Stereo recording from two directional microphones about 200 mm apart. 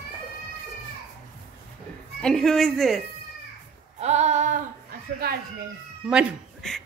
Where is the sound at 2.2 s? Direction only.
5° left (ahead or behind).